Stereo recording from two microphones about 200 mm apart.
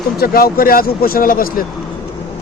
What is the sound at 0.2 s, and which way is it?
Speech, 50° left (ahead or behind).